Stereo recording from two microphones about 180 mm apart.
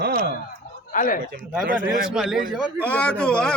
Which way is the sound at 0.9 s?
50° left (ahead or behind).